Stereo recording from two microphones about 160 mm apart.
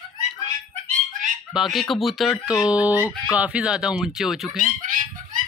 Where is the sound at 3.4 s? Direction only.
5° right (ahead or behind).